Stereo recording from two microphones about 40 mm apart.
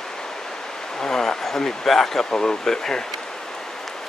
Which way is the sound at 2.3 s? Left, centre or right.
Left.